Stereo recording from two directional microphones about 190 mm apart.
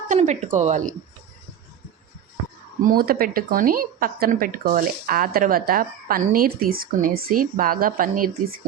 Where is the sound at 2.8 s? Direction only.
50° right (ahead or behind).